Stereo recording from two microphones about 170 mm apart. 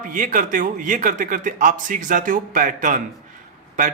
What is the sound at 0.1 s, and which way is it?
A man's voice, 50° right (ahead or behind).